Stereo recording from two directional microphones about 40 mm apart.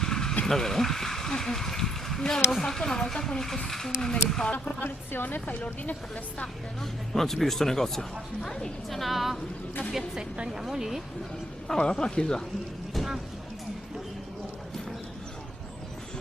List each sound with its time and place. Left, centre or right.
0.0 s vehicle: centre
0.4 s speech: centre
4.8 s a woman's voice: left
7.1 s a woman's voice: centre
10.2 s a woman's voice: right
10.6 s speech: centre
11.8 s speech: centre